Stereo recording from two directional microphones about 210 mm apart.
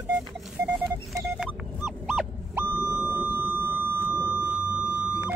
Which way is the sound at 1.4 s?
5° right (ahead or behind).